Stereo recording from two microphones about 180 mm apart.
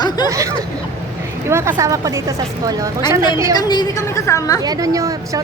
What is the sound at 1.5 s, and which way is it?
Speech, 15° right (ahead or behind).